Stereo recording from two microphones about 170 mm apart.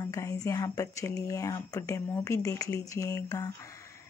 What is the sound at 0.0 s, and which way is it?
Speech, 20° left (ahead or behind).